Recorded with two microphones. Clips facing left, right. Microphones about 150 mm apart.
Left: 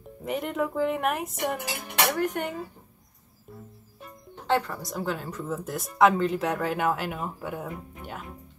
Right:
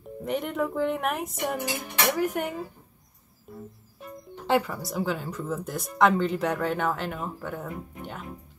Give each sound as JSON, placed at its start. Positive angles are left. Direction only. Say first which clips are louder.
{"t": 0.2, "sound": "speech", "louder": "even", "side_deg": 0}
{"t": 4.5, "sound": "speech", "louder": "right 1 dB", "side_deg": -10}